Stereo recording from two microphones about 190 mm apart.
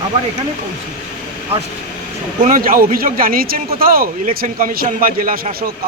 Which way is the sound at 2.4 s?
45° right (ahead or behind).